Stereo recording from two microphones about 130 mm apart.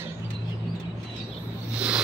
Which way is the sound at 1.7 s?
10° right (ahead or behind).